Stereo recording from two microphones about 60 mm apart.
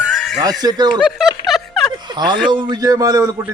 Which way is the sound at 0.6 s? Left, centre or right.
Right.